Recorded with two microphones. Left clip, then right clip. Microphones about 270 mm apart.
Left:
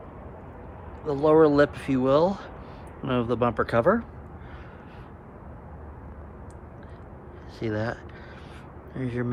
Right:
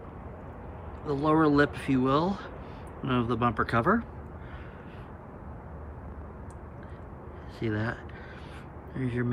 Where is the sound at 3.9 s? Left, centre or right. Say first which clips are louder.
Left 4 dB; left.